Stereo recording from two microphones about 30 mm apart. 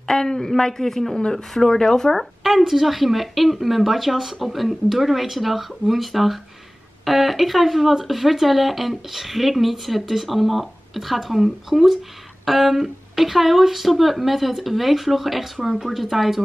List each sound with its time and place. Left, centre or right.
0.0 s speech: centre
1.7 s speech: left
2.1 s a woman's voice: centre